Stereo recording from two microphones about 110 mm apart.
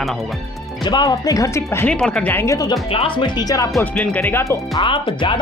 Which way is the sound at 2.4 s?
30° left (ahead or behind).